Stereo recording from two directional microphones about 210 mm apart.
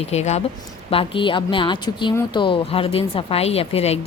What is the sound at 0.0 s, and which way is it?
A woman's voice, 30° left (ahead or behind).